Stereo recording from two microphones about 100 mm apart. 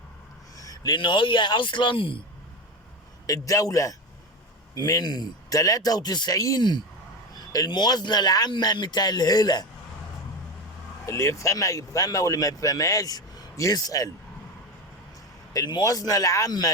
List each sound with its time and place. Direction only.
0.5 s a sound: 35° left (ahead or behind)
0.9 s speech: 50° left (ahead or behind)
3.2 s speech: 35° left (ahead or behind)
11.0 s speech: 30° left (ahead or behind)
15.5 s speech: 40° left (ahead or behind)